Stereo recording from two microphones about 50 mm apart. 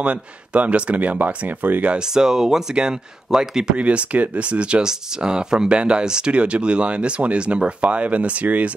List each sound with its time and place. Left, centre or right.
0.0 s speech: right
2.0 s speech: centre
3.7 s speech: right